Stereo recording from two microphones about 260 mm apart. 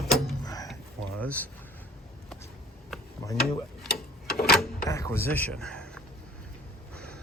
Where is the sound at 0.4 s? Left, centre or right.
Centre.